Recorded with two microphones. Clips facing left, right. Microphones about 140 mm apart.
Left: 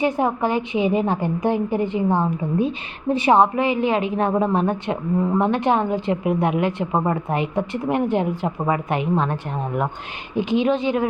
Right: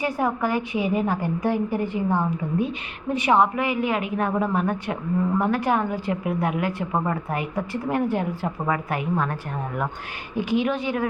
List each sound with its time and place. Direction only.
0.0 s a woman's voice: 25° left (ahead or behind)